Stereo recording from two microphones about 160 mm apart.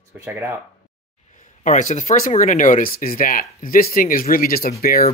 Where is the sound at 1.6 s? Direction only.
50° left (ahead or behind); by 5.1 s 70° left (ahead or behind).